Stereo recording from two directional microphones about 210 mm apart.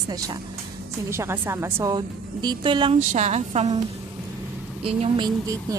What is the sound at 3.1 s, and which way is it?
Music, 35° right (ahead or behind).